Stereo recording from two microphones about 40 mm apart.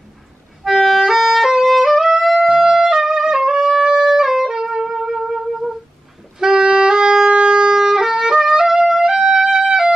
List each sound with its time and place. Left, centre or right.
0.7 s music: centre
2.7 s music: centre